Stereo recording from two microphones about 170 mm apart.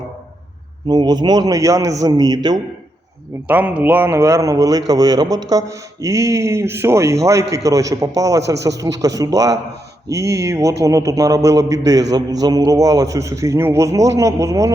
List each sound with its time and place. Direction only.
0.9 s a man's voice: 25° right (ahead or behind)
3.4 s a man's voice: 10° right (ahead or behind)